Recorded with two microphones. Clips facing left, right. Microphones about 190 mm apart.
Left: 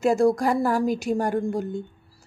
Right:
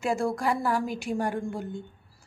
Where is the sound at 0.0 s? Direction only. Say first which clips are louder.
Left 7 dB; 40° left (ahead or behind).